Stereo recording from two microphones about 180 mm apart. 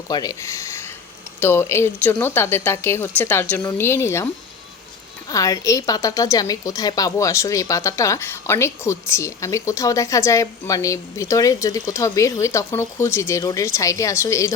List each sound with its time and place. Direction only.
0.1 s a woman's voice: 20° left (ahead or behind)
5.3 s a woman's voice: 20° left (ahead or behind)